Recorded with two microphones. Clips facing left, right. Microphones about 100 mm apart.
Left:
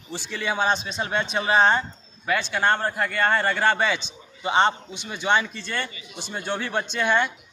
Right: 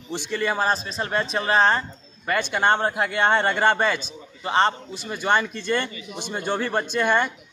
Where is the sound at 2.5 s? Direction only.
15° right (ahead or behind).